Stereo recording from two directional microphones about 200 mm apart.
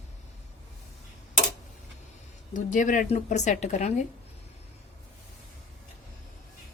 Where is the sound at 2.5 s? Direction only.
40° left (ahead or behind).